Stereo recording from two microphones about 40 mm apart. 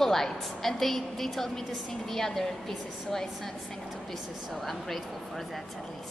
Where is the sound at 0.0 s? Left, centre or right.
Centre.